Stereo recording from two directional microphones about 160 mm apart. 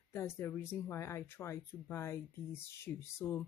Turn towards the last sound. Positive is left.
turn(degrees=15)  # may be behind; listen again after turning